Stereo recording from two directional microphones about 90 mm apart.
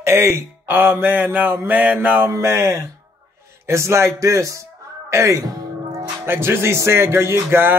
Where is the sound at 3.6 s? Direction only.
30° right (ahead or behind).